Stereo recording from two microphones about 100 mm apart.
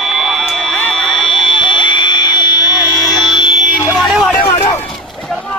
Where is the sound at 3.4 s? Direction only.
50° left (ahead or behind).